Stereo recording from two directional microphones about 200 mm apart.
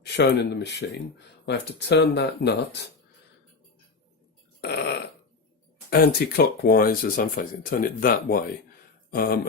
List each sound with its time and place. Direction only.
0.0 s speech: 55° left (ahead or behind)
4.6 s burping: 55° left (ahead or behind)
5.9 s speech: 50° left (ahead or behind)